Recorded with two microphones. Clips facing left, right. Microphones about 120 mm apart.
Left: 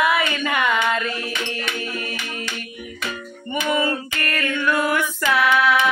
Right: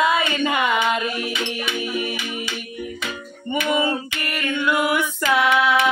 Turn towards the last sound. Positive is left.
turn(degrees=-20)  # may be behind; listen again after turning